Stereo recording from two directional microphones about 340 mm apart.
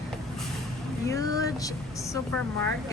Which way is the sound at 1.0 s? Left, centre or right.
Centre.